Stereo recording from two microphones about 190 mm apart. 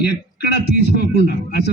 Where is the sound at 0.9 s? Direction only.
60° left (ahead or behind).